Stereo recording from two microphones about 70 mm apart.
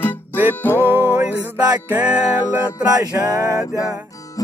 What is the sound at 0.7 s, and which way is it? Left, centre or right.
Music, right.